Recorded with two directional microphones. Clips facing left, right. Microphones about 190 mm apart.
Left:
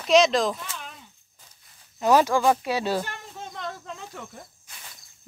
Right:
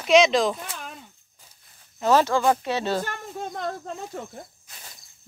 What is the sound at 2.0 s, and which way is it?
Speech, 15° left (ahead or behind).